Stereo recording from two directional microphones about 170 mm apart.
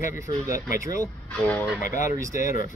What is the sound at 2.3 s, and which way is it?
Speech, 50° left (ahead or behind).